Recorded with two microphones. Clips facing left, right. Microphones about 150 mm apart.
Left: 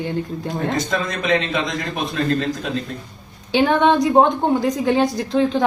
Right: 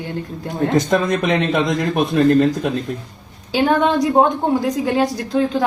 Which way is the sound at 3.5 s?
Centre (ahead or behind).